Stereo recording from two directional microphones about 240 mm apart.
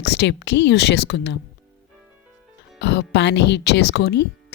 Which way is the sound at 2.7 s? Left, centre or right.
Left.